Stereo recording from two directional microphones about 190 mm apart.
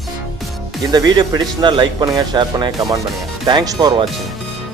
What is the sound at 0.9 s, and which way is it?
Speech, 20° right (ahead or behind).